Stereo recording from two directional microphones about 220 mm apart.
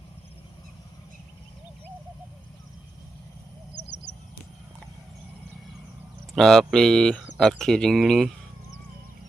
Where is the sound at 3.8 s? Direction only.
50° left (ahead or behind).